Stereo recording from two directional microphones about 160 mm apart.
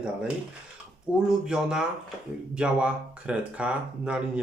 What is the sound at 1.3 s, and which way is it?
Speech, 5° right (ahead or behind).